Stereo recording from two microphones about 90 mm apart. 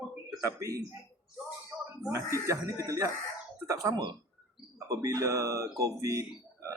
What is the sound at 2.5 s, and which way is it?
Speech, 40° right (ahead or behind).